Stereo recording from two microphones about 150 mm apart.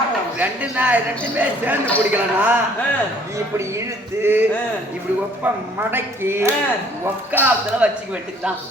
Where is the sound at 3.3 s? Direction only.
20° right (ahead or behind).